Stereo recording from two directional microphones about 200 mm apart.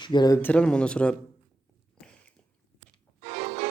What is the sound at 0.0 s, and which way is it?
Speech, 20° left (ahead or behind).